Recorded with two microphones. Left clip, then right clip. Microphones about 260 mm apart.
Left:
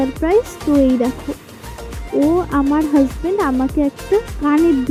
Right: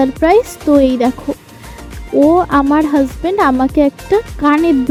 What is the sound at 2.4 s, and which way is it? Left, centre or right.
Speech, right.